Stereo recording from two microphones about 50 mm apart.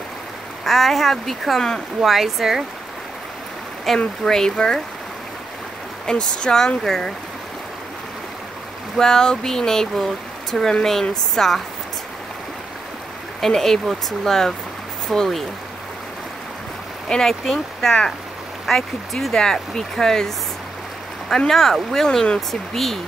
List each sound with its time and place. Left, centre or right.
0.7 s speech: centre
3.9 s speech: centre
6.0 s speech: centre
8.9 s speech: centre
13.4 s speech: centre
17.1 s speech: centre
21.5 s speech: centre
22.5 s speech: centre